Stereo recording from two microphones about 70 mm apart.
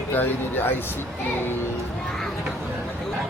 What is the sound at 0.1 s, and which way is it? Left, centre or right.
Speech, left.